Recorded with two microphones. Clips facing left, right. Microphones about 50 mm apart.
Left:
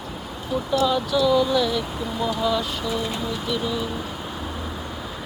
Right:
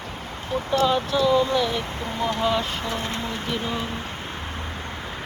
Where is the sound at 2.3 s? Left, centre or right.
Right.